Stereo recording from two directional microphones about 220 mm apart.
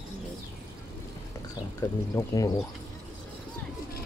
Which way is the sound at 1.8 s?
15° left (ahead or behind).